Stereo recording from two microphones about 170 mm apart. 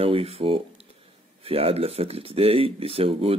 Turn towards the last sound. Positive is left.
turn(degrees=-35)  # may be behind; listen again after turning